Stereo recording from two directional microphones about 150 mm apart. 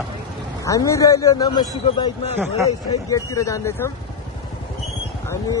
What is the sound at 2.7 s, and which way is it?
Speech, 20° left (ahead or behind).